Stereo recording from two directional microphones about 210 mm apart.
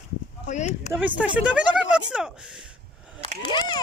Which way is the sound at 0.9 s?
5° right (ahead or behind).